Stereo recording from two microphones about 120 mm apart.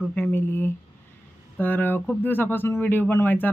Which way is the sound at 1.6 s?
15° left (ahead or behind).